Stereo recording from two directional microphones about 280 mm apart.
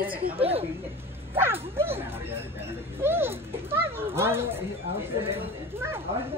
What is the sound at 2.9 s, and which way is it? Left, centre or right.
Children playing, centre.